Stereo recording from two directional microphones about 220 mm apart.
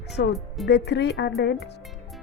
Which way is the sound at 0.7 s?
50° left (ahead or behind).